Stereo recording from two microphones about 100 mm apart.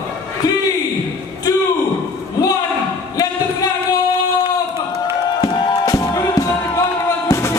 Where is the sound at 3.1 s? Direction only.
40° left (ahead or behind).